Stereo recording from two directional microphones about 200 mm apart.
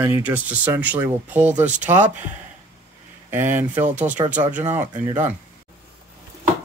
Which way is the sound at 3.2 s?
10° right (ahead or behind).